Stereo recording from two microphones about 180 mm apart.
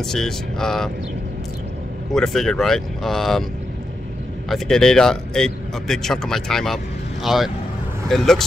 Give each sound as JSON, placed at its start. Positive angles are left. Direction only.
{"t": 0.0, "sound": "speech", "side_deg": 5}
{"t": 2.1, "sound": "speech", "side_deg": 5}
{"t": 4.5, "sound": "speech", "side_deg": 5}